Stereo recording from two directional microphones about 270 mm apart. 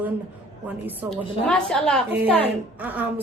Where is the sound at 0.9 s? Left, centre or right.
Centre.